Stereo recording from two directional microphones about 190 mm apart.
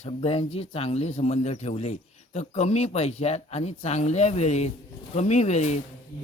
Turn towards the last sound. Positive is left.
turn(degrees=35)  # may be behind; listen again after turning